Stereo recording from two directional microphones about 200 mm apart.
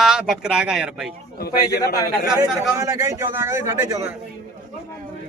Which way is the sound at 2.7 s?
15° right (ahead or behind).